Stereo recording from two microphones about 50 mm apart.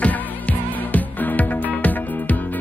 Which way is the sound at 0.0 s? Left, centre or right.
Left.